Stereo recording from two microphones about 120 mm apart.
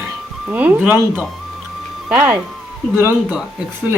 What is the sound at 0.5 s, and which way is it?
A woman's voice, 15° right (ahead or behind).